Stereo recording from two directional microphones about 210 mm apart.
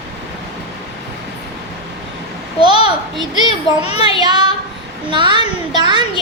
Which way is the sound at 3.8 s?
25° left (ahead or behind).